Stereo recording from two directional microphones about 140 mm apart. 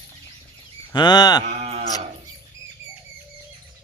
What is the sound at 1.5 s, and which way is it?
Livestock, 50° right (ahead or behind).